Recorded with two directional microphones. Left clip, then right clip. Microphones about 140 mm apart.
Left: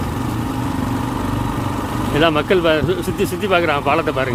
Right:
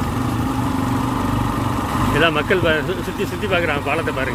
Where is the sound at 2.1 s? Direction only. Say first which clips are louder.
Left 3 dB; 30° left (ahead or behind).